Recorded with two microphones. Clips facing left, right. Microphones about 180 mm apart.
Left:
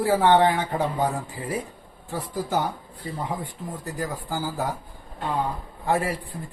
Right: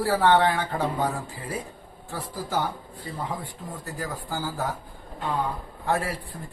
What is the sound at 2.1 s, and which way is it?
A man's voice, 20° left (ahead or behind).